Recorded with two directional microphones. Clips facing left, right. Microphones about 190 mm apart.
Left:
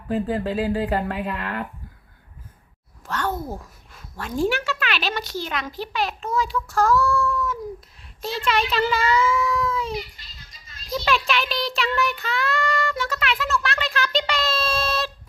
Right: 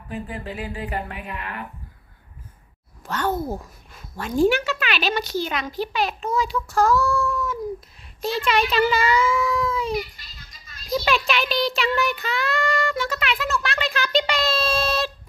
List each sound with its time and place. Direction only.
0.3 s speech: 90° left; by 1.6 s 70° left (ahead or behind)
3.1 s speech: centre (ahead or behind)
7.3 s a sound: centre (ahead or behind)
8.2 s speech: centre (ahead or behind)
10.9 s speech: 5° right (ahead or behind)
13.0 s a sound: centre (ahead or behind)